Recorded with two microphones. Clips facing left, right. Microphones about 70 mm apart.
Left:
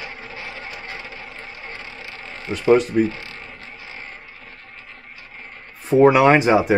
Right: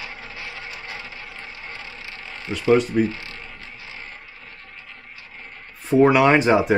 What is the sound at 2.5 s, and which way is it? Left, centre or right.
Speech, centre.